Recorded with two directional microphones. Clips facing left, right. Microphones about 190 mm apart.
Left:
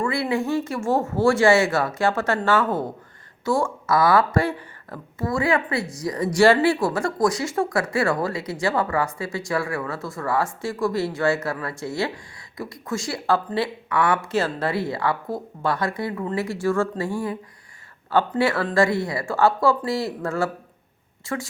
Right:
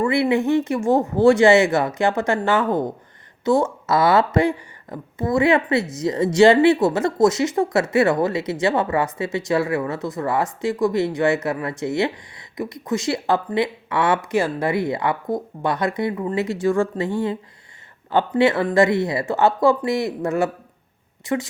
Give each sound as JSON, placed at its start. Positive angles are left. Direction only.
{"t": 0.0, "sound": "a woman's voice", "side_deg": -20}